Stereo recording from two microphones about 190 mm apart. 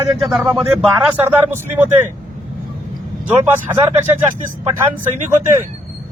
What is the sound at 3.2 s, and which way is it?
Speech, 10° right (ahead or behind).